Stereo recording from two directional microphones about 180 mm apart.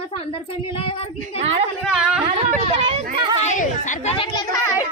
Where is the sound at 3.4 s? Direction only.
45° left (ahead or behind).